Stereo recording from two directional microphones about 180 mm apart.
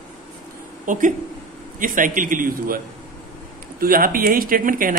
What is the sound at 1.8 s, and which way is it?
Speech, 50° right (ahead or behind).